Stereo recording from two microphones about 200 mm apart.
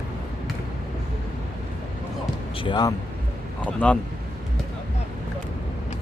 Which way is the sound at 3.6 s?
5° left (ahead or behind).